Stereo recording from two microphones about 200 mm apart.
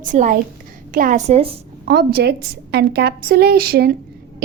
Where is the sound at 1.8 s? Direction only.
50° right (ahead or behind).